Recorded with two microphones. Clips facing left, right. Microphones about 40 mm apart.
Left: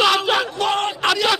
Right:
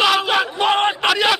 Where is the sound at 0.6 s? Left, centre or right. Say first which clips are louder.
Right 3 dB; right.